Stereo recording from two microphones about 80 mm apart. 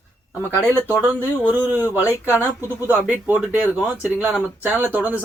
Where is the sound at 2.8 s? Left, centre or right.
Right.